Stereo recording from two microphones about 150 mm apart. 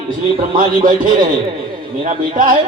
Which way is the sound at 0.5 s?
65° right (ahead or behind).